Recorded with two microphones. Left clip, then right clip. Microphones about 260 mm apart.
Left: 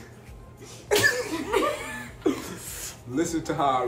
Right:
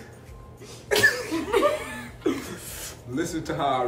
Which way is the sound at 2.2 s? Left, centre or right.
Centre.